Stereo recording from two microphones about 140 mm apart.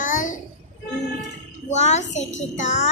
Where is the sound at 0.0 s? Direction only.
70° left (ahead or behind).